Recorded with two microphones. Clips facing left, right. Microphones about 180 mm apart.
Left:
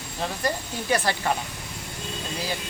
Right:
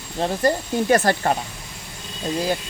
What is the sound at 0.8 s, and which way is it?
Speech, 50° right (ahead or behind).